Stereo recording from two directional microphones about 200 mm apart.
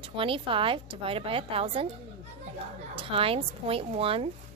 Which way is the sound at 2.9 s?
25° right (ahead or behind).